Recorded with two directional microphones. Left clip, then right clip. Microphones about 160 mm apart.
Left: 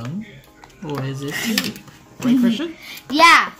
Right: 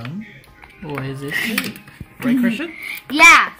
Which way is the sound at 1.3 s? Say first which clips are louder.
Right 2 dB; 30° left (ahead or behind).